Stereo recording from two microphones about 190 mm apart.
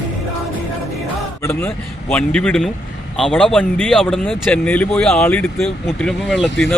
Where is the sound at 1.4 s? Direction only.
10° left (ahead or behind).